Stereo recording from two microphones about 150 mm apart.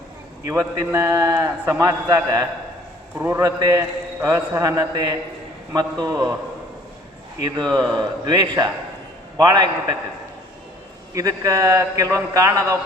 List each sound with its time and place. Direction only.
0.4 s a man's voice: 20° right (ahead or behind)
7.7 s a man's voice: 25° right (ahead or behind)
11.1 s a man's voice: 20° right (ahead or behind)